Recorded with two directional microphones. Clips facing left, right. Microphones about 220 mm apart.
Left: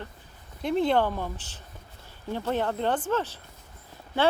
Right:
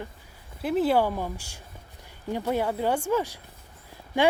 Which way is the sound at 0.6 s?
5° right (ahead or behind).